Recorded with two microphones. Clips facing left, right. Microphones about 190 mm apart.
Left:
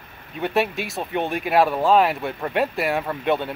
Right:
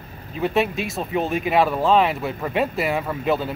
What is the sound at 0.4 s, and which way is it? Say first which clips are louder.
Speech: right 1 dB; centre (ahead or behind).